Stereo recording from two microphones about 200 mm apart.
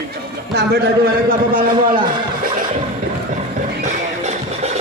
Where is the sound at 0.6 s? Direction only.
50° right (ahead or behind).